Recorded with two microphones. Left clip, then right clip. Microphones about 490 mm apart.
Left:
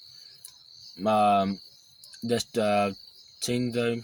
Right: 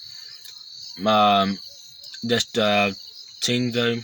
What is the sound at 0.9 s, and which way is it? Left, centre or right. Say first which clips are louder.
Speech: right 5 dB; left.